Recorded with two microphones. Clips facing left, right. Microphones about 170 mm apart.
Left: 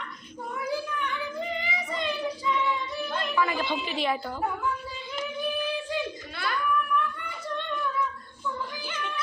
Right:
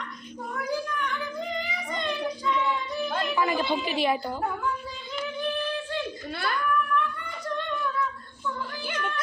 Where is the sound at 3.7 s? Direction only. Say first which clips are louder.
Right 3 dB; 5° right (ahead or behind).